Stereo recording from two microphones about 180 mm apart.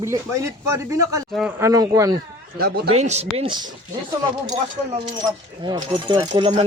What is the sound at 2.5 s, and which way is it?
Speech, 60° right (ahead or behind).